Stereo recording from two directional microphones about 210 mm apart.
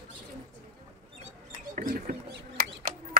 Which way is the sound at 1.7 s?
40° right (ahead or behind).